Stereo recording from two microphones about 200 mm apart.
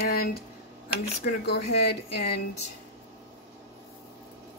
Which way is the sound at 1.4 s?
55° left (ahead or behind).